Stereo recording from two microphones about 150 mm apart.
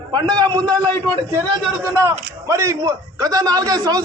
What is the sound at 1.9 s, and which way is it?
A man's voice, 20° right (ahead or behind).